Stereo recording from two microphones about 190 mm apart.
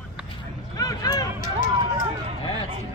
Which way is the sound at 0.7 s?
20° left (ahead or behind).